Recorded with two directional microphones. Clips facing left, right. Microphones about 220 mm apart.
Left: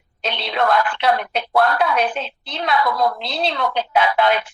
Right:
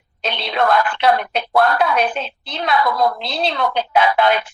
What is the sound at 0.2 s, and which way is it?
A woman's voice, 45° right (ahead or behind).